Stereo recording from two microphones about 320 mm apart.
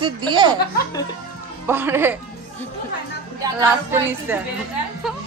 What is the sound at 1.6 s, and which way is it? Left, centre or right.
Speech, centre.